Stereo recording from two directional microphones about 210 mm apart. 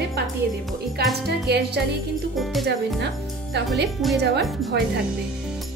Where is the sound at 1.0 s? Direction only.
50° right (ahead or behind).